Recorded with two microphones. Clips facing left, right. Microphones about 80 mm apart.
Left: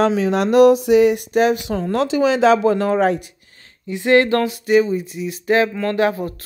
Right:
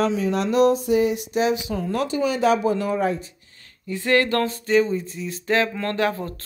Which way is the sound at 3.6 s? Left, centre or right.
Left.